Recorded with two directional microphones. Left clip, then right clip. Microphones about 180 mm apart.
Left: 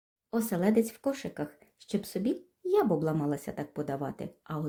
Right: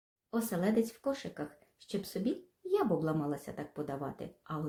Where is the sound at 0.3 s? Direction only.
35° left (ahead or behind).